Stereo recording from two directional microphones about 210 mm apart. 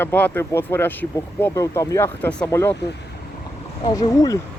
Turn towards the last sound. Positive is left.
turn(degrees=15)  # may be behind; listen again after turning